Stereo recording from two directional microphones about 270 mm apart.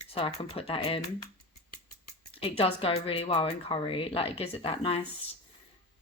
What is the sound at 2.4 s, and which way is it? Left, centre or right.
Speech, left.